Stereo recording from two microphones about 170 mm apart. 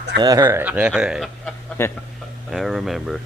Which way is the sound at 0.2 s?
20° right (ahead or behind).